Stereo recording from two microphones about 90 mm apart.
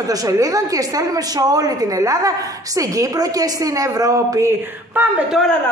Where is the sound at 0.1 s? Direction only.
40° right (ahead or behind).